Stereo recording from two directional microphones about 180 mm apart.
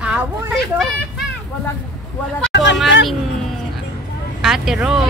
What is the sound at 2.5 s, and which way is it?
Vehicle, 80° left.